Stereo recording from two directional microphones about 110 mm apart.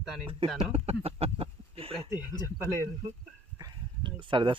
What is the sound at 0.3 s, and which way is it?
Speech, 55° right (ahead or behind).